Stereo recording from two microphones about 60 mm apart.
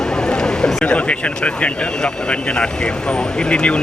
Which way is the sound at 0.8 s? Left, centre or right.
Centre.